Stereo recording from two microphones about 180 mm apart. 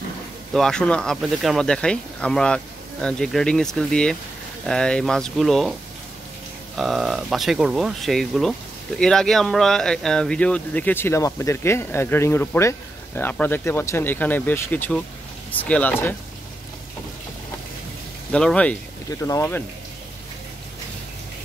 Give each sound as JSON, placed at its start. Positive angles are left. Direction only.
{"t": 0.5, "sound": "speech", "side_deg": 5}
{"t": 6.8, "sound": "speech", "side_deg": 0}
{"t": 18.3, "sound": "speech", "side_deg": 5}
{"t": 19.0, "sound": "speech", "side_deg": 20}